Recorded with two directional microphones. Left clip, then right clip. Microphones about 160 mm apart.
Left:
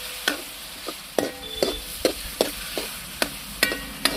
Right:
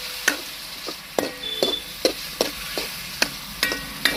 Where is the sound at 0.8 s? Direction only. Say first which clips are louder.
Even; 45° left (ahead or behind).